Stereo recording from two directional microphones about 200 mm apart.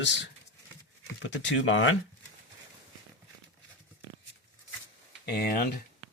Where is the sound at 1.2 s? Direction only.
75° left (ahead or behind).